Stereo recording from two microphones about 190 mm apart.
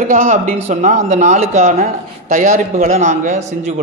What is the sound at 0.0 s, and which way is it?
Speech, 45° right (ahead or behind).